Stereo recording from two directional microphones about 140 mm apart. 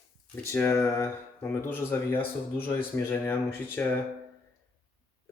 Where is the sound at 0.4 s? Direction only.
20° left (ahead or behind).